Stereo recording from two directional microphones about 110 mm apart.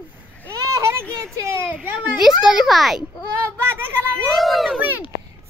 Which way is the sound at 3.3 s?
20° right (ahead or behind).